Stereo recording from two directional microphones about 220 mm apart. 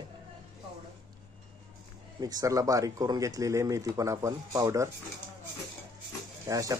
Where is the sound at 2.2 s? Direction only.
15° right (ahead or behind).